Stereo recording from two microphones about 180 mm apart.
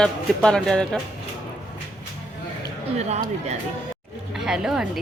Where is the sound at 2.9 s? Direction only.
35° right (ahead or behind).